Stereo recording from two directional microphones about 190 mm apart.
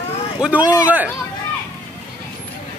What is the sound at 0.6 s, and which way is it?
Speech, 20° left (ahead or behind).